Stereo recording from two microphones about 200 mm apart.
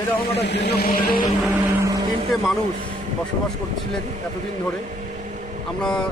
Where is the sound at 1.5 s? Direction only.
15° right (ahead or behind).